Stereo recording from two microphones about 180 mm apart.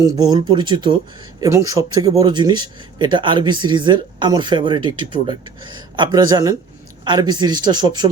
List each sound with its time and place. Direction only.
0.0 s speech: 25° right (ahead or behind)